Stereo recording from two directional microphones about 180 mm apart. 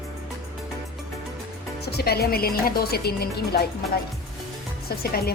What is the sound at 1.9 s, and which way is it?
A woman's voice, 60° left (ahead or behind).